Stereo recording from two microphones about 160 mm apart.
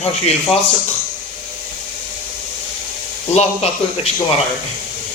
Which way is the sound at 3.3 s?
40° left (ahead or behind).